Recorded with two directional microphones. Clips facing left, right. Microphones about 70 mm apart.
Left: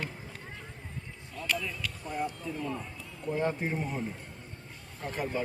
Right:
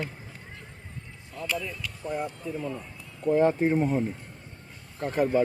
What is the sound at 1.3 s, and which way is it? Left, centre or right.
Speech, centre.